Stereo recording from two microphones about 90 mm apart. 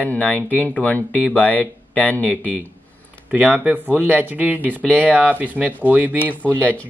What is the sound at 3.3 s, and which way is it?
Speech, 15° right (ahead or behind).